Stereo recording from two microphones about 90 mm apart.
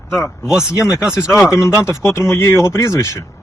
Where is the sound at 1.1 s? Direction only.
35° left (ahead or behind).